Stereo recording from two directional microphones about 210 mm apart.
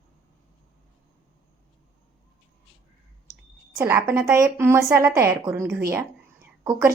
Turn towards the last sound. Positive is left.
turn(degrees=-15)  # may be behind; listen again after turning